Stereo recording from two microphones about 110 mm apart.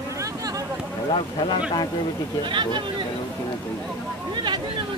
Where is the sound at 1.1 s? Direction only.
45° left (ahead or behind).